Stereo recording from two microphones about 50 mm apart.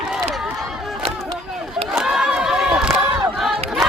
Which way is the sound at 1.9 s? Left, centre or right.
Centre.